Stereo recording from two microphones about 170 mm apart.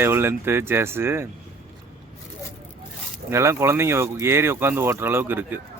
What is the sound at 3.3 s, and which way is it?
Speech, 15° right (ahead or behind).